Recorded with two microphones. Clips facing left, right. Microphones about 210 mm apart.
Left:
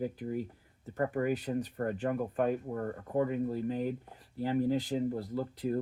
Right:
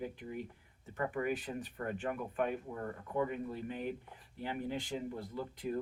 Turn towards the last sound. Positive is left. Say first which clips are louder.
# left 6 dB
turn(degrees=40)  # may be behind; listen again after turning